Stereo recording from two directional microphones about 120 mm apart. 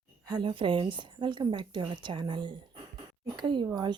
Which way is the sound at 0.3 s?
40° right (ahead or behind).